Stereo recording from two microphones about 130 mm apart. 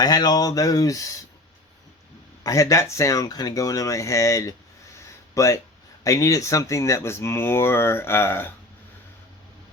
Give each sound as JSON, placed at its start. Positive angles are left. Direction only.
{"t": 0.0, "sound": "speech", "side_deg": 30}
{"t": 2.4, "sound": "speech", "side_deg": 25}
{"t": 4.9, "sound": "a sound", "side_deg": 25}
{"t": 6.0, "sound": "speech", "side_deg": 25}